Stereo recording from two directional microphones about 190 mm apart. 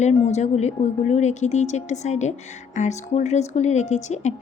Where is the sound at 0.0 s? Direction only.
35° left (ahead or behind).